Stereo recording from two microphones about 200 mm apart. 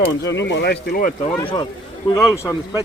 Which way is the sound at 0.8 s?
45° left (ahead or behind).